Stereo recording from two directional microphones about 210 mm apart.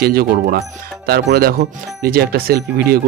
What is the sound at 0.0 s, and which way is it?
Speech, 45° right (ahead or behind).